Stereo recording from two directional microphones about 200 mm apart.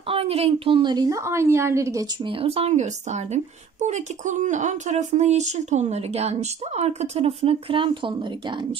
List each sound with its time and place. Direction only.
0.1 s a woman's voice: 30° right (ahead or behind)